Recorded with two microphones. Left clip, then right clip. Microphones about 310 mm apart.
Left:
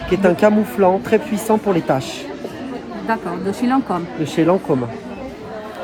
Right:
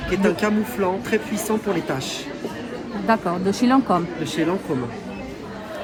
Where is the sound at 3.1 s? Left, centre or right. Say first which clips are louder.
Right 1 dB; centre.